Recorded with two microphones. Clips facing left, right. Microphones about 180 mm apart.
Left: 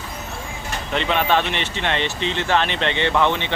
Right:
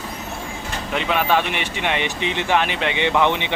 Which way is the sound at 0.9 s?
5° right (ahead or behind).